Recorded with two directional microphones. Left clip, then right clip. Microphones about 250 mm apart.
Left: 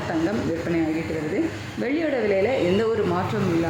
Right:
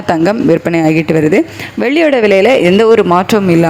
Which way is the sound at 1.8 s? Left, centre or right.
Right.